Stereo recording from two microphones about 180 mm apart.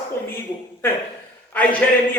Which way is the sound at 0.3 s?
15° left (ahead or behind).